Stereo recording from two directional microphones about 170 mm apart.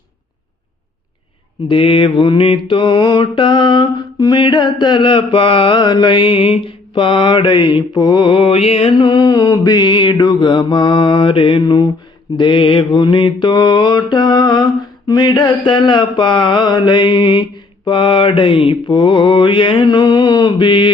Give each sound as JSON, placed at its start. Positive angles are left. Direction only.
{"t": 1.6, "sound": "mantra", "side_deg": 30}